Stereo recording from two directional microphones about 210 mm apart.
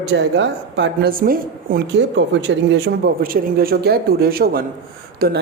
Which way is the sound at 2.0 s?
60° right (ahead or behind).